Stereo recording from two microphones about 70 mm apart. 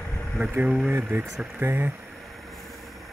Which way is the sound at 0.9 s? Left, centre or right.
Right.